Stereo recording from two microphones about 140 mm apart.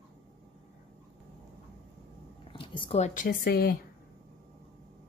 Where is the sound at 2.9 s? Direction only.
60° left (ahead or behind); by 3.8 s 90° left.